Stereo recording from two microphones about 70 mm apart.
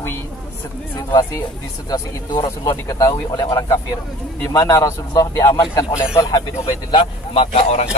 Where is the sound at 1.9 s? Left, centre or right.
Left.